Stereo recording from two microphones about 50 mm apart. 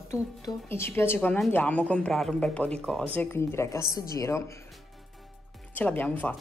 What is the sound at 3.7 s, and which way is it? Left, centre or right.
Speech, left.